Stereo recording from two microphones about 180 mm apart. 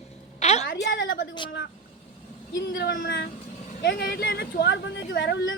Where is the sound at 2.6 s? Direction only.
65° left (ahead or behind).